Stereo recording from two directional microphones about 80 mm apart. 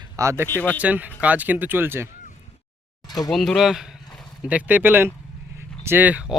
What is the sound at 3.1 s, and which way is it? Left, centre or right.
Speech, left.